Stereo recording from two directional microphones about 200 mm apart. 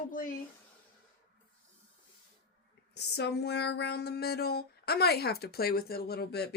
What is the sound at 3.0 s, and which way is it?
Speech, 55° left (ahead or behind).